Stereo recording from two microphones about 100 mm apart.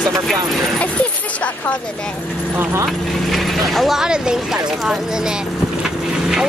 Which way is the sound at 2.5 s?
20° right (ahead or behind).